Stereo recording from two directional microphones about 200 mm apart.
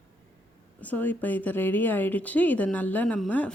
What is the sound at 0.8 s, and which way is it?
A woman's voice, 10° left (ahead or behind).